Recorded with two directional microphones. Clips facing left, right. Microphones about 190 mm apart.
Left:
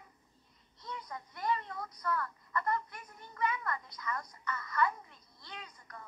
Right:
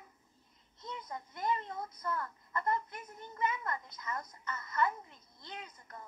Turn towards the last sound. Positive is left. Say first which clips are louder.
# right 2 dB
turn(degrees=-25)  # may be behind; listen again after turning